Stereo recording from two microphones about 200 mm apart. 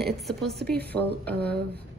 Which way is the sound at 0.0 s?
Centre (ahead or behind).